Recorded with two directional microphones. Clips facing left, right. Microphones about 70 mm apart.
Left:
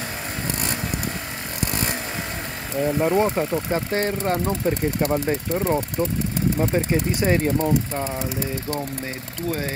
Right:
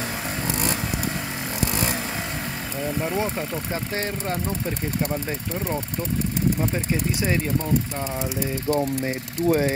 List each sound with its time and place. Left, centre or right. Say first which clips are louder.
2.8 s speech: left 6 dB; centre
3.7 s speech: left 4 dB; left
8.2 s speech: even; right